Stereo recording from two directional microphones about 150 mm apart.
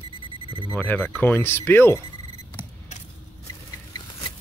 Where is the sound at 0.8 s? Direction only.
5° left (ahead or behind).